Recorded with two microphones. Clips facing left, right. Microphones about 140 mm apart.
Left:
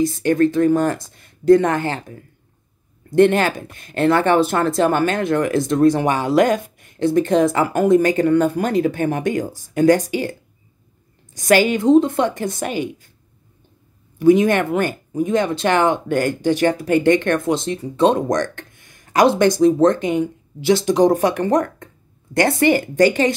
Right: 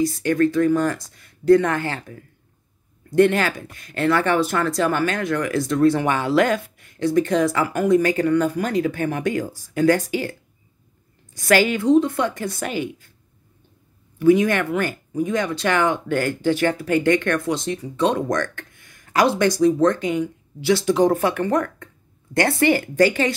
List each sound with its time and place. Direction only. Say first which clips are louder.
0.0 s speech: left 3 dB; 25° left (ahead or behind)
11.3 s speech: left 3 dB; 20° left (ahead or behind)
14.3 s speech: left 3 dB; 25° left (ahead or behind)
22.3 s speech: left 3 dB; 20° left (ahead or behind)